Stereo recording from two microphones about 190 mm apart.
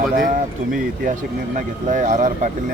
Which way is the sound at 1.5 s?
40° right (ahead or behind).